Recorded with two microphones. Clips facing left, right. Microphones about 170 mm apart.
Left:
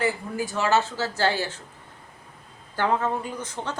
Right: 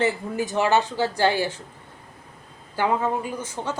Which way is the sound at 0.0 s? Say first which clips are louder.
Right 3 dB; 20° right (ahead or behind).